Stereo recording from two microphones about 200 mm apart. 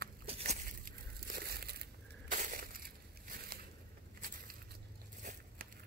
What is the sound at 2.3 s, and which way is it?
Crushing, 40° right (ahead or behind).